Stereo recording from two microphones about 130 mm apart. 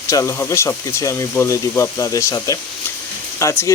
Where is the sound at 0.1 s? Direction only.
20° left (ahead or behind).